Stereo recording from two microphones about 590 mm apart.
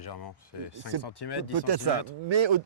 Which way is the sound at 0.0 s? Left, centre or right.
Left.